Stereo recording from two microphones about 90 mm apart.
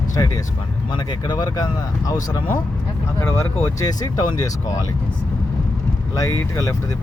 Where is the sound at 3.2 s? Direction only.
30° left (ahead or behind).